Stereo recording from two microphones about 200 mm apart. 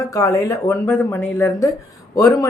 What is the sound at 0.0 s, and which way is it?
A woman's voice, 15° left (ahead or behind).